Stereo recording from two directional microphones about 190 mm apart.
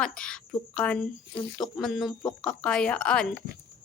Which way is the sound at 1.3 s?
20° left (ahead or behind).